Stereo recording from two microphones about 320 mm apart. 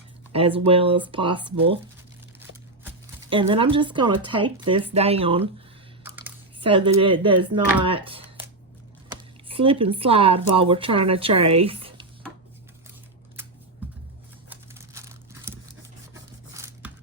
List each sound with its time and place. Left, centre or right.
0.3 s speech: centre
3.2 s speech: centre
6.0 s computer keyboard: centre
6.7 s speech: centre
9.5 s speech: centre
14.5 s crumpling: centre
16.6 s music: centre